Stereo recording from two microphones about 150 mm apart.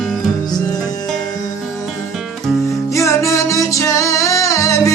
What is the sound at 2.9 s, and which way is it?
Music, 20° left (ahead or behind).